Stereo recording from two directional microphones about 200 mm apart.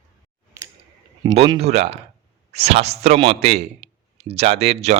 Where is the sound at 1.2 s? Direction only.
25° right (ahead or behind).